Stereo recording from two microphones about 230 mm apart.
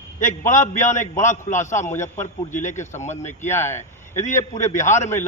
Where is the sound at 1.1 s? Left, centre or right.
Left.